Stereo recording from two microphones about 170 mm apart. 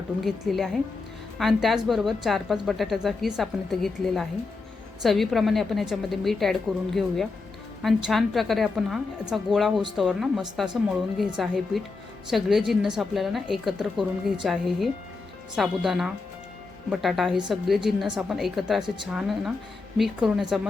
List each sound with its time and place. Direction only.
0.2 s a woman's voice: centre (ahead or behind)